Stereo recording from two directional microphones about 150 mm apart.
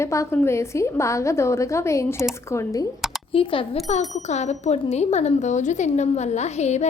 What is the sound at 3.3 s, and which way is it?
Speech, 35° left (ahead or behind).